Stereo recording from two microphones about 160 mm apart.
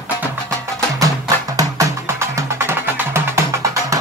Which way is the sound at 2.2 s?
15° right (ahead or behind).